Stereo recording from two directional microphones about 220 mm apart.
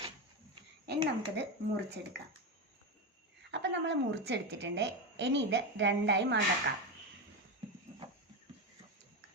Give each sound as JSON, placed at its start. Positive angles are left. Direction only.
{"t": 0.9, "sound": "a woman's voice", "side_deg": -50}
{"t": 3.5, "sound": "a woman's voice", "side_deg": -55}